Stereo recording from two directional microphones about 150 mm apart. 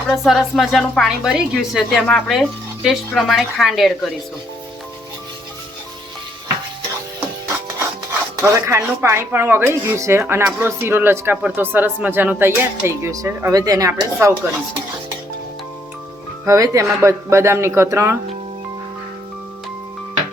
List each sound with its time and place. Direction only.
0.1 s a woman's voice: centre (ahead or behind)
8.4 s speech: 20° right (ahead or behind)
16.5 s speech: 20° right (ahead or behind)